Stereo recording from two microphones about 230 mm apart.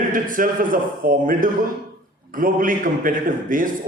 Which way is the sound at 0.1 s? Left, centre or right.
Right.